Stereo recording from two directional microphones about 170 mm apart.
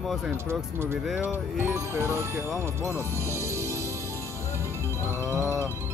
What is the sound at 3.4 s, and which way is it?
Music, 15° right (ahead or behind).